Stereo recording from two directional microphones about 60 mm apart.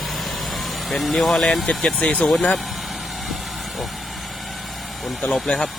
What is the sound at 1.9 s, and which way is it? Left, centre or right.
Speech, left.